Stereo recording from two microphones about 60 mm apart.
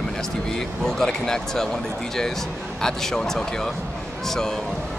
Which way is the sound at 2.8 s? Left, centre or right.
Centre.